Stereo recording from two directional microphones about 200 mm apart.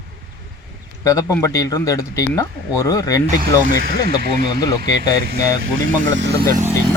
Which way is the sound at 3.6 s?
45° right (ahead or behind).